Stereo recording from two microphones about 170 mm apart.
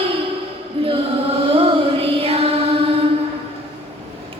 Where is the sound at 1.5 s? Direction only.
35° right (ahead or behind).